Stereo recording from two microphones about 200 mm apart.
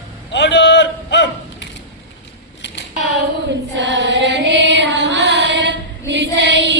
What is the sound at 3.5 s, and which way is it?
Music, 60° right (ahead or behind).